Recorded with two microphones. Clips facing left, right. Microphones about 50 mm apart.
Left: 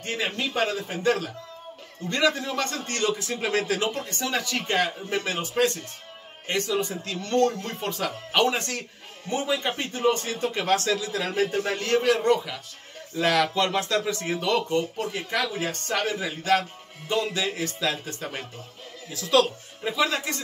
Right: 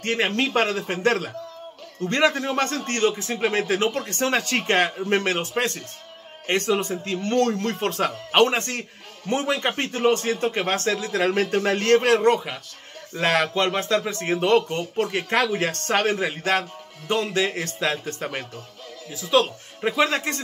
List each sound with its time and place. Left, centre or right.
0.0 s speech: right
2.0 s a man's voice: right
7.1 s a man's voice: right
7.3 s speech: right
9.3 s speech: right
11.5 s a man's voice: right
15.0 s a man's voice: right
19.1 s speech: centre
19.8 s a man's voice: right